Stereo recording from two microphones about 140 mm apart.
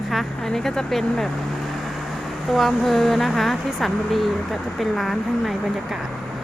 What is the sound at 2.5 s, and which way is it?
Speech, centre (ahead or behind).